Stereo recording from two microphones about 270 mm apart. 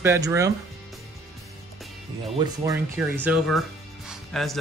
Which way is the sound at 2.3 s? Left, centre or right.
Centre.